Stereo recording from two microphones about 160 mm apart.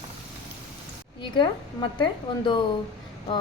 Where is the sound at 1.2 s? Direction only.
30° left (ahead or behind).